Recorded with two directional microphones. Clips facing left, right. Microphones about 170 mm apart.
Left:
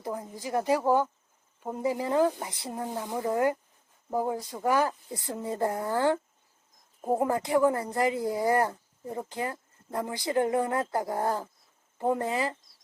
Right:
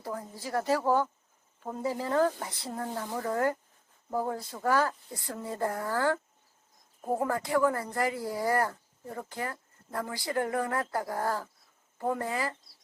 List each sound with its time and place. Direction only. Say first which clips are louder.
0.0 s speech: left 3 dB; 15° left (ahead or behind)